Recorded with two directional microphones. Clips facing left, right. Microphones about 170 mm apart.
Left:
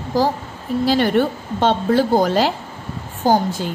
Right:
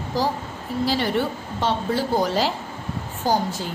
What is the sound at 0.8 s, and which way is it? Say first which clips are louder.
A woman's voice: left 6 dB; 60° left (ahead or behind).